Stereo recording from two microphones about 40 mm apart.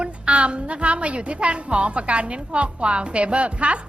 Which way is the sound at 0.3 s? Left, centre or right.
Right.